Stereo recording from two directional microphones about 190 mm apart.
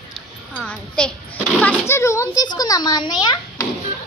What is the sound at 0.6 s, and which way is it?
A child's voice, 5° left (ahead or behind).